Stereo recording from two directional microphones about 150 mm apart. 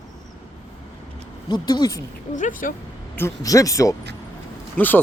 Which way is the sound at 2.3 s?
60° left (ahead or behind).